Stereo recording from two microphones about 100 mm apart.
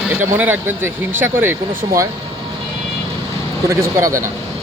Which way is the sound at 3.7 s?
30° right (ahead or behind).